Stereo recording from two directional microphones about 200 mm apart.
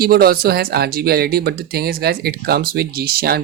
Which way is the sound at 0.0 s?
50° right (ahead or behind).